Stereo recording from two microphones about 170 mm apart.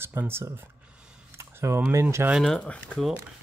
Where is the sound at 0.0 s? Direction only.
15° right (ahead or behind).